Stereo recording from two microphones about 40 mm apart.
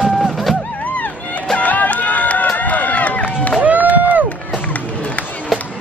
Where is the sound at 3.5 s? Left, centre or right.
Right.